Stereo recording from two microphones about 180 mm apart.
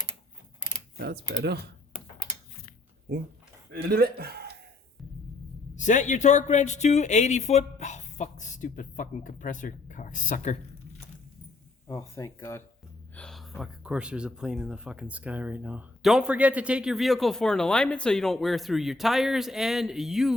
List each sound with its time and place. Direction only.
0.9 s speech: 65° right (ahead or behind)
3.7 s a man's voice: 60° right (ahead or behind)
5.7 s speech: 45° left (ahead or behind)
11.9 s speech: 15° left (ahead or behind)
13.1 s speech: centre (ahead or behind)